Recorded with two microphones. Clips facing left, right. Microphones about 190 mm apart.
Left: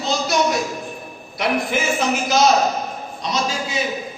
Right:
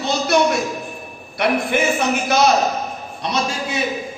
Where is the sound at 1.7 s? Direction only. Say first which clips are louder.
Right 4 dB; 60° right (ahead or behind).